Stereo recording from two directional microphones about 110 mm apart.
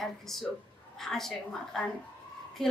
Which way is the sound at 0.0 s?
Centre (ahead or behind).